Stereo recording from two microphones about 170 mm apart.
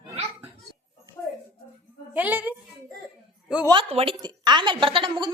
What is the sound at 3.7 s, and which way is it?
A woman's voice, 35° right (ahead or behind).